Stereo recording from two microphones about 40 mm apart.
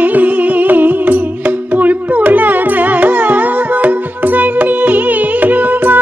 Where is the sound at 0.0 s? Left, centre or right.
Right.